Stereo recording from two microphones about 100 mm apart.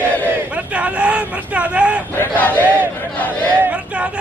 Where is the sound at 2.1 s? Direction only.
20° left (ahead or behind).